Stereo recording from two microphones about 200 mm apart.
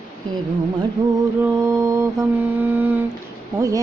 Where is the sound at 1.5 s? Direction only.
15° right (ahead or behind).